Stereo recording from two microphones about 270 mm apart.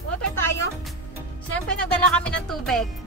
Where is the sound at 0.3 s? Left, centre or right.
Centre.